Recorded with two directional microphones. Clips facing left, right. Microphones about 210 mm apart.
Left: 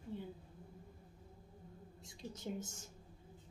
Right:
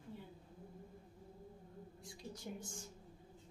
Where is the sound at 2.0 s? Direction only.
25° left (ahead or behind).